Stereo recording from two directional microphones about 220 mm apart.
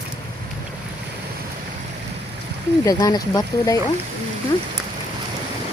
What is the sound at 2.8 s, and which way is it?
Speech, 15° left (ahead or behind).